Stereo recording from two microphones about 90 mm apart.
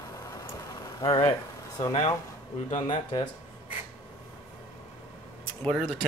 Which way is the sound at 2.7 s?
55° left (ahead or behind).